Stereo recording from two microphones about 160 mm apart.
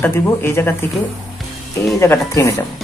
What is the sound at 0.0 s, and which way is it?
Speech, 15° left (ahead or behind).